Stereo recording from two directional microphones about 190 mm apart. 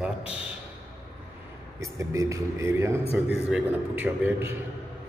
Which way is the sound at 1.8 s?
15° right (ahead or behind).